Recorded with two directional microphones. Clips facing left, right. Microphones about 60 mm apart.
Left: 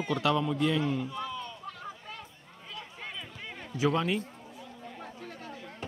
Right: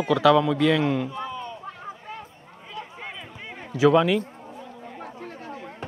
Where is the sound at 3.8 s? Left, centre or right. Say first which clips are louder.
Right 10 dB; right.